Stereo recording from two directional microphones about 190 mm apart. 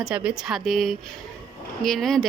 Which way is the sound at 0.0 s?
5° right (ahead or behind).